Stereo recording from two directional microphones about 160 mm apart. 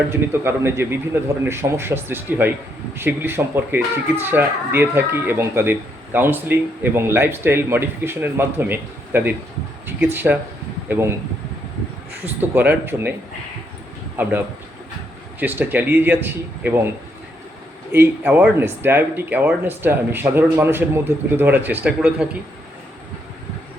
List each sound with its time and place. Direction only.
0.1 s speech: 15° right (ahead or behind)
12.2 s speech: 10° right (ahead or behind)
14.2 s speech: 10° right (ahead or behind)
17.9 s speech: 10° right (ahead or behind)